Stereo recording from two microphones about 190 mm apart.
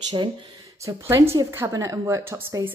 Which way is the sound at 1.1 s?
15° right (ahead or behind).